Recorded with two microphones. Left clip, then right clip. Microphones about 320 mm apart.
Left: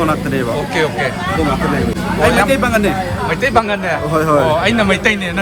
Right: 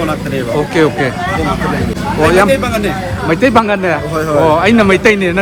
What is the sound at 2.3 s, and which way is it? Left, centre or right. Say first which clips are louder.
Speech: right 3 dB; centre.